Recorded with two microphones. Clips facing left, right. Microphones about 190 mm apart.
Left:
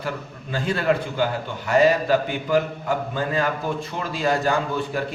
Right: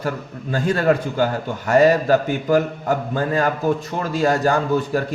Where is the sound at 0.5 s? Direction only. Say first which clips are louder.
Right 4 dB; 45° right (ahead or behind).